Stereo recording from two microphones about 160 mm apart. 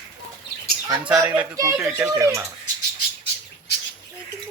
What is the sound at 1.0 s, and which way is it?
Speech, 10° right (ahead or behind).